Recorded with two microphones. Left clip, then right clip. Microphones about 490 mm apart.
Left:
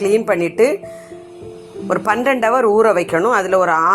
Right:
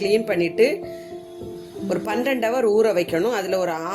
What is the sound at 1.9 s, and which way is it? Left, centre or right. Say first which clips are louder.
Speech: left 7 dB; right.